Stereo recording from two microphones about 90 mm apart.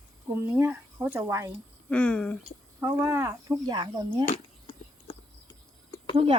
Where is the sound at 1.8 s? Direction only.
10° left (ahead or behind).